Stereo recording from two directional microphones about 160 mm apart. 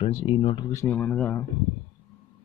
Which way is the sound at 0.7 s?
15° left (ahead or behind).